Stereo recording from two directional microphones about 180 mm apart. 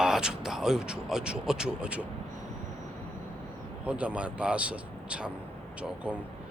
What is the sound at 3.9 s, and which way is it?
Speech, 5° right (ahead or behind).